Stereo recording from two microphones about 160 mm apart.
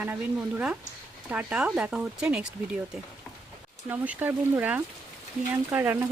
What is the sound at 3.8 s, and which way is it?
Speech, 10° right (ahead or behind).